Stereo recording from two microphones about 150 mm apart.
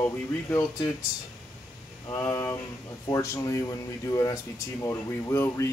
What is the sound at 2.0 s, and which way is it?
A man's voice, 20° left (ahead or behind).